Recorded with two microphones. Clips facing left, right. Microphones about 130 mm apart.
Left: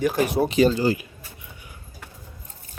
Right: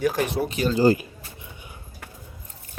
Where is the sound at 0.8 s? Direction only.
40° right (ahead or behind).